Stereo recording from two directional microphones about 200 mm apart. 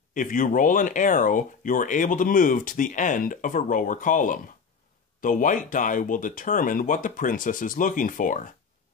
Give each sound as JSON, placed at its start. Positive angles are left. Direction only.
{"t": 0.1, "sound": "speech", "side_deg": 40}